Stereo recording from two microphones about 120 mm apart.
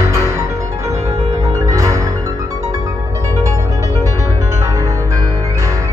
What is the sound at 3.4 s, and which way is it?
Music, 25° right (ahead or behind).